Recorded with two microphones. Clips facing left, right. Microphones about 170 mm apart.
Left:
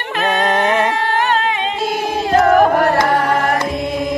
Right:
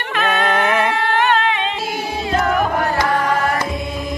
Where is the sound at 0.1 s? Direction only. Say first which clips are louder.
Left 2 dB; 35° left (ahead or behind).